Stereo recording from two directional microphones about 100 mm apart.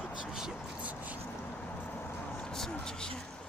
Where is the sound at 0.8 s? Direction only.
15° right (ahead or behind).